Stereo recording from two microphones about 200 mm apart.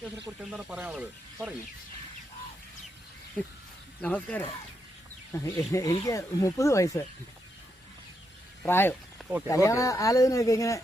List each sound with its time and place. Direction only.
0.5 s speech: 5° right (ahead or behind)
4.0 s speech: 5° left (ahead or behind)
8.6 s speech: 10° left (ahead or behind)